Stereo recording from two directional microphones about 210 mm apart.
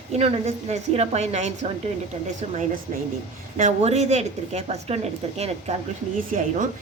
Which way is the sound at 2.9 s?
40° right (ahead or behind).